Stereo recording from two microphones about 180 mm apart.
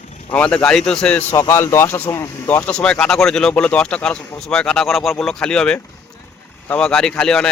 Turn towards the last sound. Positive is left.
turn(degrees=5)  # may be behind; listen again after turning